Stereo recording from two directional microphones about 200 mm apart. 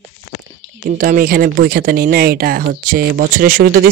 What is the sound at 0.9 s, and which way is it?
Speech, 40° right (ahead or behind).